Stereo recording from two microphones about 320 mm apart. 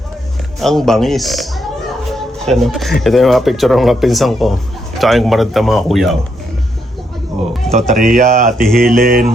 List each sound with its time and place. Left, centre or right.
0.6 s speech: centre
2.1 s music: centre
3.0 s speech: centre
7.7 s speech: right
8.6 s speech: centre
9.0 s speech: right